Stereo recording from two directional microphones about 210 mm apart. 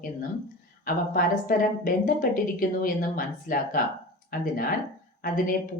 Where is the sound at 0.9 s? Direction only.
40° left (ahead or behind).